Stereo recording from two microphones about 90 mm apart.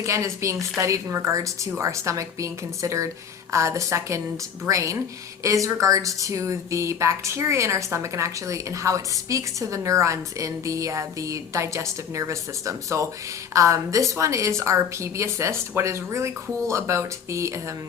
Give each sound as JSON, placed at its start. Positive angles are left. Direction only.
{"t": 0.0, "sound": "speech", "side_deg": -35}